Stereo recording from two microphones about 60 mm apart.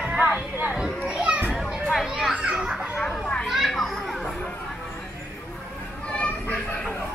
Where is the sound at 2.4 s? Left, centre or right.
Centre.